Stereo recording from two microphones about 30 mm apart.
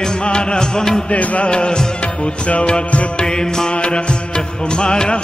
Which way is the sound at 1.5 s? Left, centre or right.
Left.